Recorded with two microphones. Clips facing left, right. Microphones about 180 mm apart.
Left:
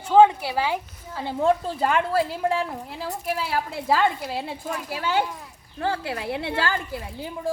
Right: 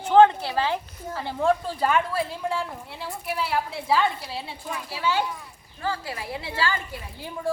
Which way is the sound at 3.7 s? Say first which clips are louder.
Left 3 dB; 50° left (ahead or behind).